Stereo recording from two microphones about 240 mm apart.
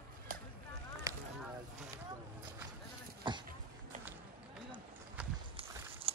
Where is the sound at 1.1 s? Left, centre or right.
Centre.